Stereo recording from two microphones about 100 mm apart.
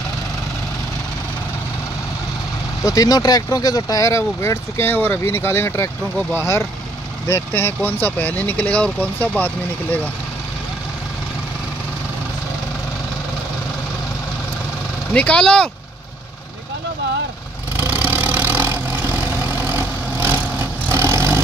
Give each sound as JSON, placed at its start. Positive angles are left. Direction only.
{"t": 2.8, "sound": "speech", "side_deg": 35}
{"t": 15.1, "sound": "speech", "side_deg": 10}
{"t": 17.7, "sound": "vehicle", "side_deg": -20}